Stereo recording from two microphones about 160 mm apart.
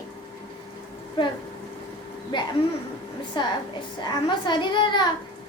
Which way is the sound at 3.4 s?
30° left (ahead or behind).